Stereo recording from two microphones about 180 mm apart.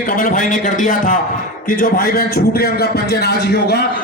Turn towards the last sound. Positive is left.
turn(degrees=65)  # may be behind; listen again after turning